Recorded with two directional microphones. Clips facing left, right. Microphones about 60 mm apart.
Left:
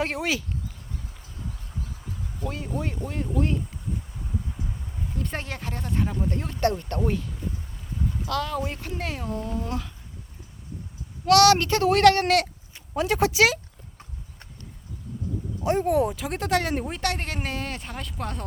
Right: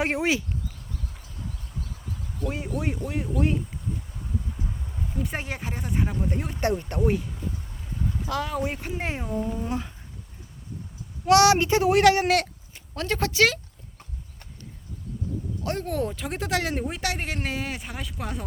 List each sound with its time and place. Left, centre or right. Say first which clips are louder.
0.0 s speech: right 2 dB; right
2.7 s speech: right 1 dB; centre
5.1 s speech: right 1 dB; centre
8.3 s speech: even; centre
11.3 s speech: even; centre
12.9 s speech: left 4 dB; centre
15.6 s speech: left 7 dB; centre